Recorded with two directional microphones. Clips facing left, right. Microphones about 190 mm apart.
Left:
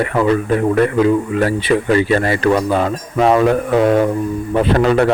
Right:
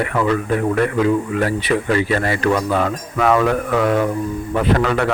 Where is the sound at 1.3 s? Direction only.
30° left (ahead or behind).